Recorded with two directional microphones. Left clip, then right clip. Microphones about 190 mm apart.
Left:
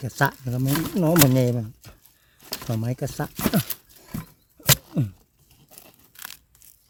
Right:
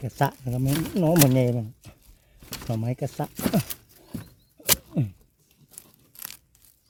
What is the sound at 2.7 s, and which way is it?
Speech, 30° left (ahead or behind).